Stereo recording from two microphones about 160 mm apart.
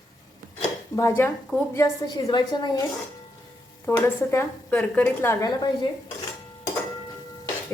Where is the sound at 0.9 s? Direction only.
15° left (ahead or behind).